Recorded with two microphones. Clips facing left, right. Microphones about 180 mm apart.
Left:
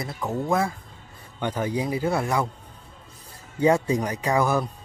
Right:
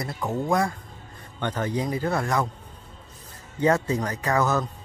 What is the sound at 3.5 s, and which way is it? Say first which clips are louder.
Speech: left 2 dB; 10° left (ahead or behind).